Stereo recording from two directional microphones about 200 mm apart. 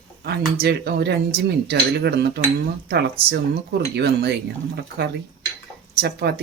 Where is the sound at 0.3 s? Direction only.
55° right (ahead or behind).